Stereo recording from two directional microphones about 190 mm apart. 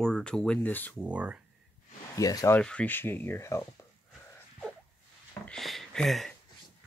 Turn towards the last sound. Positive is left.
turn(degrees=0)  # may be behind; listen again after turning